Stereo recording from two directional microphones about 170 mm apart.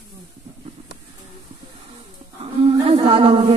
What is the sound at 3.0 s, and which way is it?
Speech, 30° right (ahead or behind).